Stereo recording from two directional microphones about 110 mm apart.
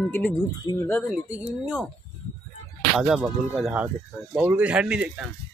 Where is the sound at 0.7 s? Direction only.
45° left (ahead or behind).